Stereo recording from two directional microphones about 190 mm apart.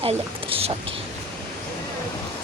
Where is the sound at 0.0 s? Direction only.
30° right (ahead or behind).